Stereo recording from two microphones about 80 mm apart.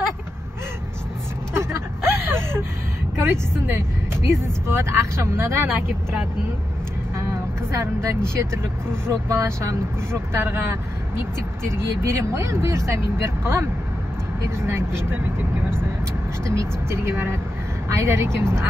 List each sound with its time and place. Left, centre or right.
1.5 s vehicle: right
3.2 s speech: right
7.7 s speech: right
14.7 s speech: right
16.4 s speech: right